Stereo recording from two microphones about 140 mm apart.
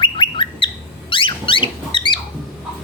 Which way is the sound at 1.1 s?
40° left (ahead or behind).